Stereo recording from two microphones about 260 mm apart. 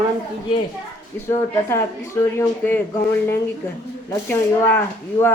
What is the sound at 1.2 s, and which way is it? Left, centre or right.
Speech, centre.